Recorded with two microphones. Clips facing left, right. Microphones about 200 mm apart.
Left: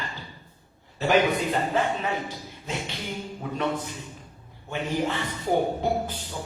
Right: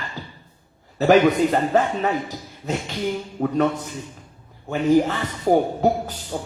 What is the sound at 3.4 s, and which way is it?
Speech, 60° right (ahead or behind).